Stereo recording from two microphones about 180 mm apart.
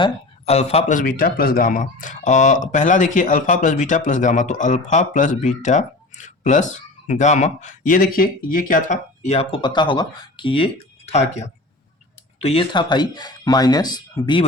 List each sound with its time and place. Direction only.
0.0 s speech: 35° left (ahead or behind)